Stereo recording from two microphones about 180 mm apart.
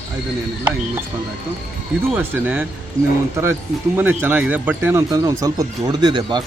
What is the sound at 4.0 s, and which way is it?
Speech, 10° right (ahead or behind).